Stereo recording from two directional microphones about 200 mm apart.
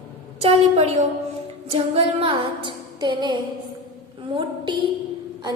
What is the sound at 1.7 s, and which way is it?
Female singing, 30° right (ahead or behind).